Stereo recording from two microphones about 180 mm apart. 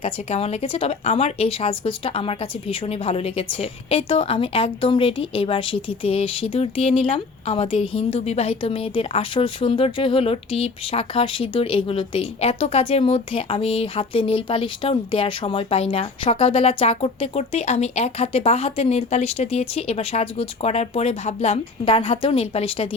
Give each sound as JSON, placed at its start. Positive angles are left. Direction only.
{"t": 0.0, "sound": "a woman's voice", "side_deg": 35}